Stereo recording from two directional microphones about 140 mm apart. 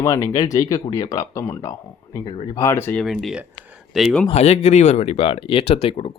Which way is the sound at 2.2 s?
40° left (ahead or behind).